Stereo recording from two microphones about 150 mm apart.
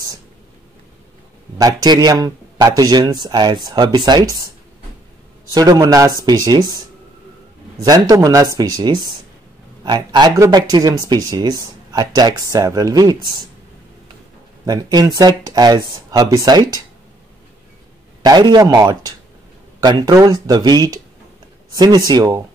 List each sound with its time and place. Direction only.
1.6 s speech: 25° right (ahead or behind)
5.5 s speech: 25° right (ahead or behind)
7.8 s speech: 25° right (ahead or behind)
14.7 s speech: 25° right (ahead or behind)
18.2 s speech: 25° right (ahead or behind)